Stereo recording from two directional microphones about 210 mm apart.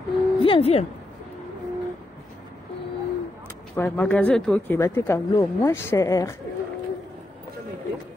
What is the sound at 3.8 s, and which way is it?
Speech, 5° left (ahead or behind).